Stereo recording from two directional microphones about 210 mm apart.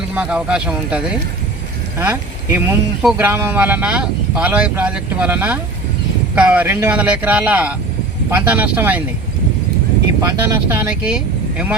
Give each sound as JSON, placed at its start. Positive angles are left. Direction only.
{"t": 0.1, "sound": "speech", "side_deg": -5}
{"t": 10.2, "sound": "speech", "side_deg": -15}